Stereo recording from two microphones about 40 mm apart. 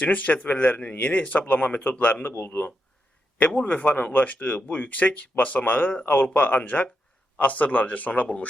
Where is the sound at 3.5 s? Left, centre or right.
Left.